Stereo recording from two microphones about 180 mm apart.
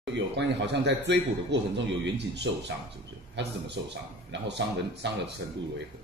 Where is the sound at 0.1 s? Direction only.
75° right (ahead or behind).